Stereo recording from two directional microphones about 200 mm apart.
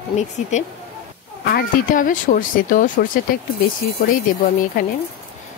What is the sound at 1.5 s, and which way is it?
Speech, 40° left (ahead or behind).